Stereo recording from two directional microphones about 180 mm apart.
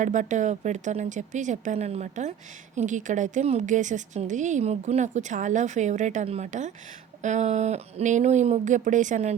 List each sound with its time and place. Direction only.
0.0 s a woman's voice: 45° right (ahead or behind)